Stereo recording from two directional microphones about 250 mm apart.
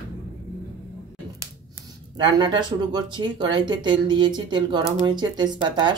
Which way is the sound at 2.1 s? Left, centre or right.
Centre.